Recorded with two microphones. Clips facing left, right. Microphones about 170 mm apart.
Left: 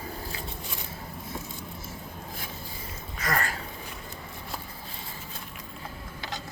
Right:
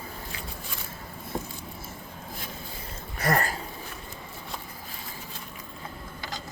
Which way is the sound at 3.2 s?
35° right (ahead or behind).